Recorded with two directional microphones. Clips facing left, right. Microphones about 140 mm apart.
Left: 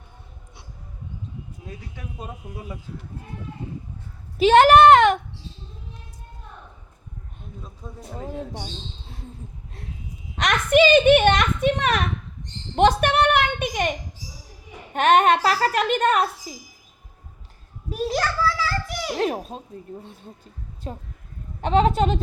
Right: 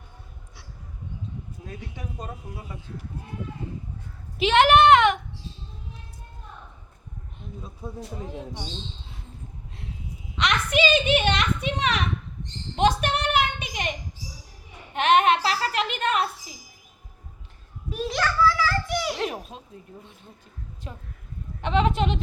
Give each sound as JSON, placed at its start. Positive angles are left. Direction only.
{"t": 4.4, "sound": "speech", "side_deg": 40}
{"t": 7.8, "sound": "speech", "side_deg": -10}
{"t": 10.3, "sound": "a child's voice", "side_deg": 50}
{"t": 12.7, "sound": "a sound", "side_deg": 55}
{"t": 14.9, "sound": "speech", "side_deg": 45}
{"t": 17.9, "sound": "a child's voice", "side_deg": 40}